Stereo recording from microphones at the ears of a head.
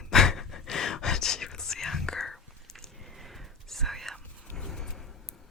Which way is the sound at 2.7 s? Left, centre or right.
Centre.